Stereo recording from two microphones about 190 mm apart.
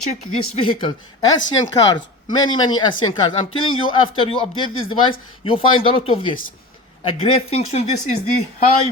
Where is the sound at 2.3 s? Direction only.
20° left (ahead or behind).